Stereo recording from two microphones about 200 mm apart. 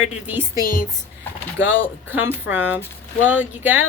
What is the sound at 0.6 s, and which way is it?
Speech, 45° left (ahead or behind).